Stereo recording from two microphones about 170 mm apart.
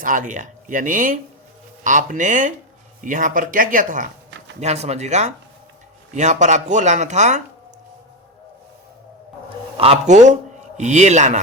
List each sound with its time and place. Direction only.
0.0 s speech: 50° right (ahead or behind)
4.6 s speech: 40° right (ahead or behind)
9.7 s speech: 35° right (ahead or behind)